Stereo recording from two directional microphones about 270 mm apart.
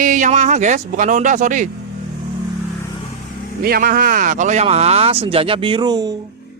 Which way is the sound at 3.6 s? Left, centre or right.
Right.